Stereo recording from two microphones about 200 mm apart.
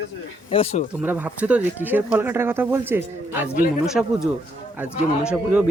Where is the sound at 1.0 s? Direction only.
10° right (ahead or behind).